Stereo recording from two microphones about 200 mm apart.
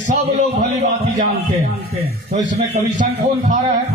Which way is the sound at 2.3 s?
35° right (ahead or behind).